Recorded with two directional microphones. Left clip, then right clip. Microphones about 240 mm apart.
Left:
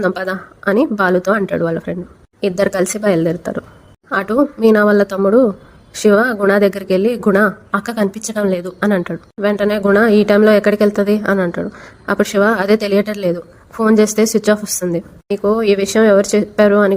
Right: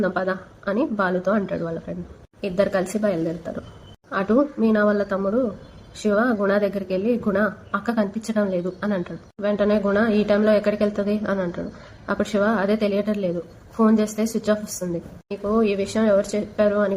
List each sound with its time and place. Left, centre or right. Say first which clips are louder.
0.0 s a woman's voice: left 5 dB; left